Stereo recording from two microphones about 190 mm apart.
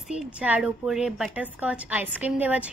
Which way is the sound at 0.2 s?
5° right (ahead or behind).